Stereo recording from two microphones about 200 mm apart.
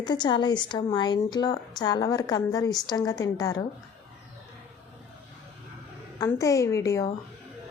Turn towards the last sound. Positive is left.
turn(degrees=15)  # may be behind; listen again after turning